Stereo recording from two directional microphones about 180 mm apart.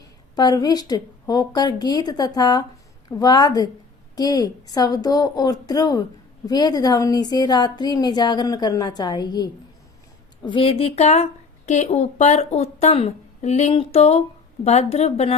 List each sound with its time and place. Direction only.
0.0 s a woman's voice: 20° left (ahead or behind)